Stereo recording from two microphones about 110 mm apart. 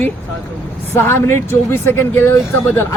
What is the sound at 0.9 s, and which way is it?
A man's voice, 20° left (ahead or behind).